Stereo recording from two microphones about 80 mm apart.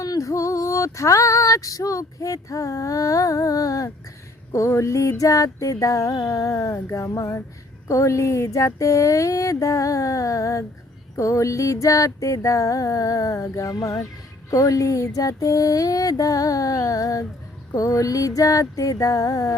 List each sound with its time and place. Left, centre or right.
0.0 s female singing: left
4.5 s a sound: left
7.9 s music: left